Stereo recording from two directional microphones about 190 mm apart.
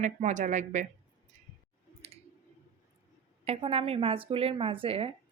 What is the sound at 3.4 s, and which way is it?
Speech, 35° right (ahead or behind).